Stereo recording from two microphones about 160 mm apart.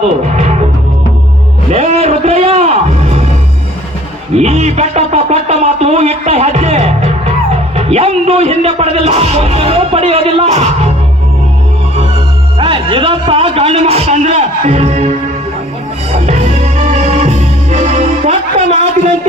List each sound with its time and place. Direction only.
1.7 s music: 40° right (ahead or behind)
4.4 s music: 40° right (ahead or behind)
7.8 s speech: 40° right (ahead or behind)
12.5 s speech: 30° right (ahead or behind)
16.1 s music: 45° right (ahead or behind)